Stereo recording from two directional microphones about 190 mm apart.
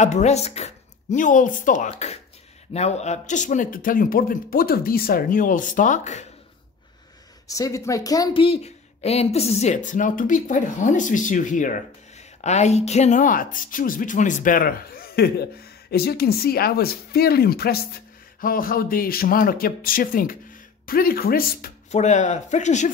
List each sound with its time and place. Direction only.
0.0 s speech: 35° left (ahead or behind)
7.4 s speech: 15° left (ahead or behind)
8.5 s speech: 35° left (ahead or behind); by 21.7 s 50° left (ahead or behind)
21.9 s speech: 40° left (ahead or behind)